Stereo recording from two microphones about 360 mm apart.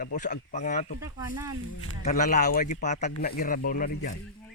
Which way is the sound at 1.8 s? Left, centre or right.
Centre.